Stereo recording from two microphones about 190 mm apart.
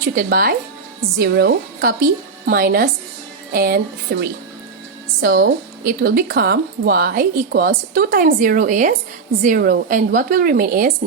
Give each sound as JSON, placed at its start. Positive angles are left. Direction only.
{"t": 0.0, "sound": "speech", "side_deg": -50}